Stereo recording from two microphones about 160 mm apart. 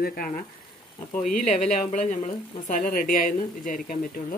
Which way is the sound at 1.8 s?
50° left (ahead or behind).